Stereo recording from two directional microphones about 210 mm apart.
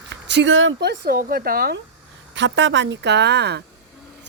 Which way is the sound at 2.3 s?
60° right (ahead or behind).